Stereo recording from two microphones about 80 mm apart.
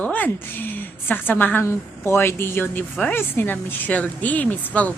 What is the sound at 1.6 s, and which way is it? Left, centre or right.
A woman's voice, left.